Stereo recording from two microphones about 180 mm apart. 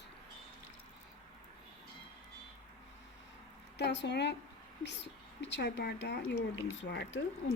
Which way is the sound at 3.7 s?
75° left (ahead or behind).